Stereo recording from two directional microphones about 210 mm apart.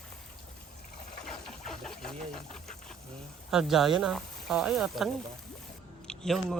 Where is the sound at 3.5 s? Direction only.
Centre (ahead or behind).